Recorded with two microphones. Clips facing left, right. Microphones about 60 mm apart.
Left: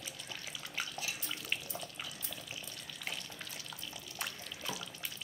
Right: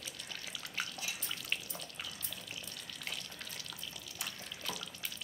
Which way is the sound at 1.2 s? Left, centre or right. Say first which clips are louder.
Left 1 dB; centre.